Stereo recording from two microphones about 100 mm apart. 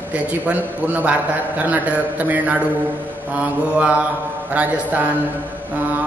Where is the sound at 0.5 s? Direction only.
15° right (ahead or behind).